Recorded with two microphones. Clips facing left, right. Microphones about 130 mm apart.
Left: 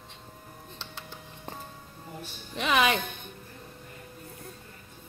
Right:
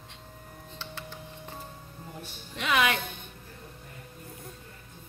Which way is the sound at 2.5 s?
25° left (ahead or behind).